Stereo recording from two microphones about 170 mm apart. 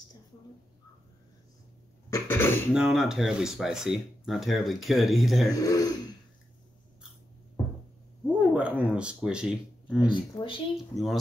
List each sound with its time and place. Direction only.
2.0 s cough: 15° left (ahead or behind)
2.7 s speech: 5° right (ahead or behind)
5.6 s speech: 20° left (ahead or behind)
8.3 s speech: 10° right (ahead or behind)
10.0 s speech: 30° left (ahead or behind)
10.9 s speech: centre (ahead or behind)